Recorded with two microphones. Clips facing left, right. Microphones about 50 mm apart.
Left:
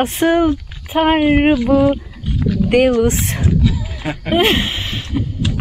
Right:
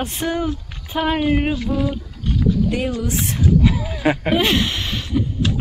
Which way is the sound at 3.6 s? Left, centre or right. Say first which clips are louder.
Right 3 dB; right.